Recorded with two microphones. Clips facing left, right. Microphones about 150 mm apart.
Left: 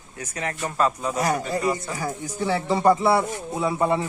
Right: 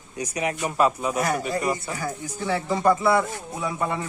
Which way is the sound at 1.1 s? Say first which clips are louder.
Left 1 dB; 30° left (ahead or behind).